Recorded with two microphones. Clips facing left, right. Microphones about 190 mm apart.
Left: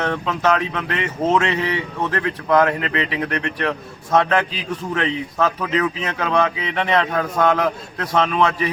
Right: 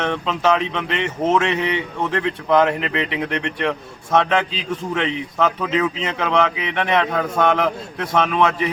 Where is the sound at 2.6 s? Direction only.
5° right (ahead or behind).